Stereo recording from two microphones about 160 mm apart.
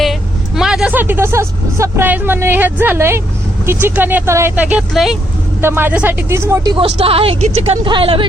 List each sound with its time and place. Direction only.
0.0 s speech: centre (ahead or behind)
5.5 s speech: 15° right (ahead or behind)
6.7 s speech: 35° right (ahead or behind)